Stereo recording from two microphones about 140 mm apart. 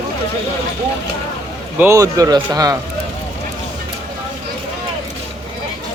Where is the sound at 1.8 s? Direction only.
20° right (ahead or behind).